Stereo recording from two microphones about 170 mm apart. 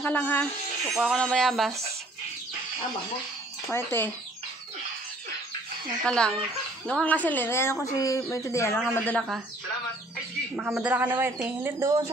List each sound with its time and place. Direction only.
0.0 s a woman's voice: 10° left (ahead or behind)
0.8 s speech: centre (ahead or behind)
3.7 s a woman's voice: 15° left (ahead or behind)
6.0 s a woman's voice: 5° left (ahead or behind)
10.5 s speech: 5° right (ahead or behind)